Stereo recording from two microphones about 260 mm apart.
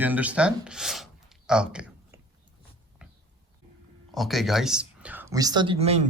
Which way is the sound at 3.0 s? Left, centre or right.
Centre.